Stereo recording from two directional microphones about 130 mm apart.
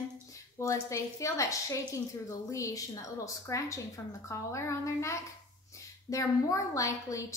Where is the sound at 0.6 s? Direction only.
25° left (ahead or behind).